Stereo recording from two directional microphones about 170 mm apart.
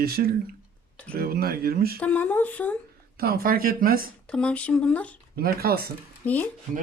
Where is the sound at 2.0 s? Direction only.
10° left (ahead or behind).